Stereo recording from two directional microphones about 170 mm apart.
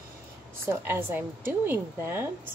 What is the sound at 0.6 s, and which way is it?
A woman's voice, 15° right (ahead or behind).